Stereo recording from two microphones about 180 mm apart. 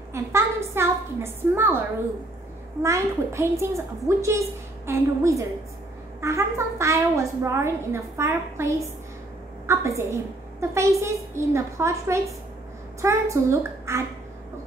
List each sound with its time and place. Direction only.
0.1 s a child's voice: 15° right (ahead or behind)